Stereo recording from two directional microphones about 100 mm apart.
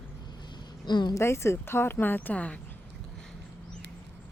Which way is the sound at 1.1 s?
25° left (ahead or behind).